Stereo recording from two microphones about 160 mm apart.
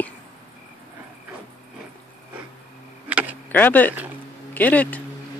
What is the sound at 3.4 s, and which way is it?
Speech, 10° left (ahead or behind).